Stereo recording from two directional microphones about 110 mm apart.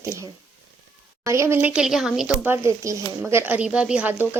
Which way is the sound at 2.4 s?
20° right (ahead or behind).